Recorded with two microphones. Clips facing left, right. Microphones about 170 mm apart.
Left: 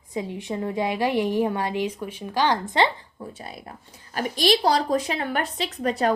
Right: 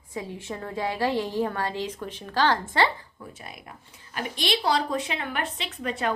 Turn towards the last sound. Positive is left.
turn(degrees=40)  # may be behind; listen again after turning